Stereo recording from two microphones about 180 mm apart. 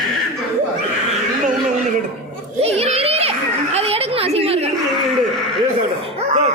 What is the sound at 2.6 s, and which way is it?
Children playing, 35° right (ahead or behind).